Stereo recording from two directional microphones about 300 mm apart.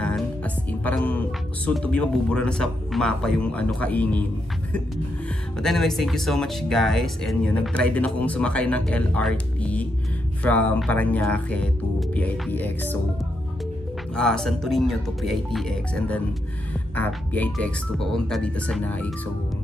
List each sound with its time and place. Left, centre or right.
0.0 s music: centre
1.7 s speech: centre
5.6 s speech: centre
14.1 s speech: centre